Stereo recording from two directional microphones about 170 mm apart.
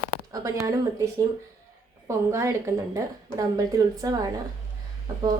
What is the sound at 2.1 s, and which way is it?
A woman's voice, 15° right (ahead or behind).